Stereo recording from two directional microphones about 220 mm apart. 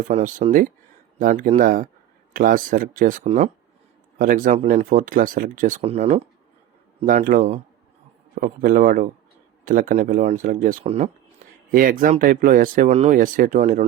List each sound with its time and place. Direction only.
0.0 s speech: 35° right (ahead or behind)